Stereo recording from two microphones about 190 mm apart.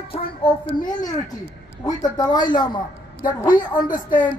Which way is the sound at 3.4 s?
45° left (ahead or behind).